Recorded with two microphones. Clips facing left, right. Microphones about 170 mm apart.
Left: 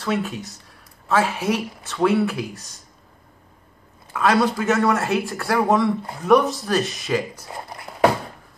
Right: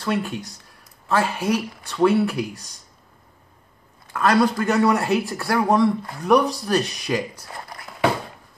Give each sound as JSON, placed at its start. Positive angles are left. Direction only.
{"t": 0.0, "sound": "a man's voice", "side_deg": 0}
{"t": 4.1, "sound": "a man's voice", "side_deg": 5}